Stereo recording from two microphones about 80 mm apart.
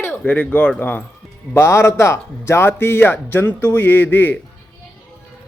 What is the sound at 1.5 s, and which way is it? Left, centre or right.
Speech, left.